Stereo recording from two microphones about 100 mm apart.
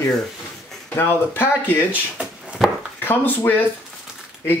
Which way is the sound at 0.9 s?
20° left (ahead or behind).